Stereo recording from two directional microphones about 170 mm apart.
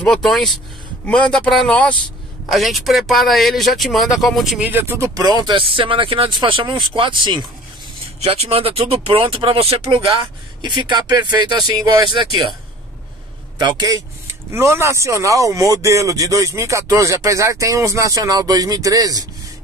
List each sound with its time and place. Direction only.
0.0 s speech: 5° left (ahead or behind); by 12.4 s 25° right (ahead or behind)
13.6 s speech: 25° right (ahead or behind)